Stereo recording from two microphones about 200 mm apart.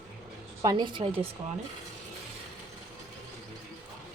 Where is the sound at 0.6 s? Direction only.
20° right (ahead or behind).